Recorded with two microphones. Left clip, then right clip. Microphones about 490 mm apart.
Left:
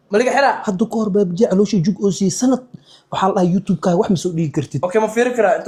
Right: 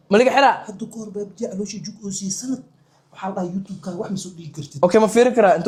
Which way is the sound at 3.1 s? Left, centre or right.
Left.